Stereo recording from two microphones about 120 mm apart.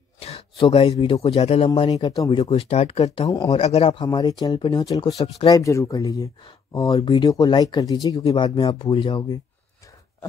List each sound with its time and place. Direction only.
0.2 s speech: 55° left (ahead or behind)
2.0 s speech: 30° left (ahead or behind)
2.5 s speech: 55° left (ahead or behind)
3.3 s speech: 30° left (ahead or behind)
3.5 s speech: 55° left (ahead or behind); by 7.0 s 30° left (ahead or behind)
7.0 s speech: 45° left (ahead or behind)
7.2 s speech: 35° left (ahead or behind)
8.4 s speech: 45° left (ahead or behind)